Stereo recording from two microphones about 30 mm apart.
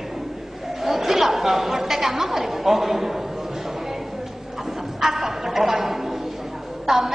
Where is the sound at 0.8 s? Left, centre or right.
Centre.